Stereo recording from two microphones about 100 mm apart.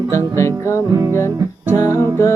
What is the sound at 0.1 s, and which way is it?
Music, 30° left (ahead or behind).